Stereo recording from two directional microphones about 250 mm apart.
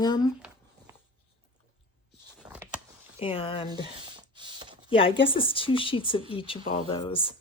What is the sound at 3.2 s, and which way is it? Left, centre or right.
Speech, left.